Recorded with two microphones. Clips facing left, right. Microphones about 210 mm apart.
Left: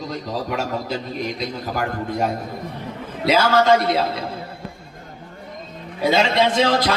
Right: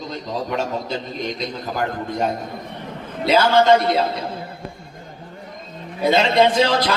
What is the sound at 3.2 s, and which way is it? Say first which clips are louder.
Speech: right 1 dB; centre (ahead or behind).